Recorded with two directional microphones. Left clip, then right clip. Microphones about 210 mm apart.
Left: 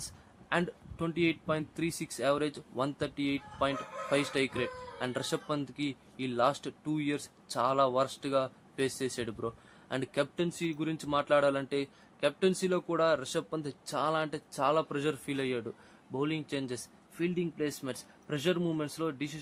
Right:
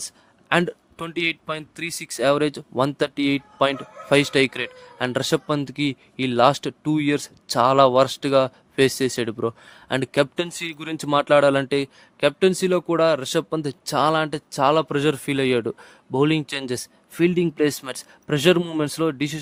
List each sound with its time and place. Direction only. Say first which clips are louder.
0.0 s speech: right 10 dB; 35° right (ahead or behind)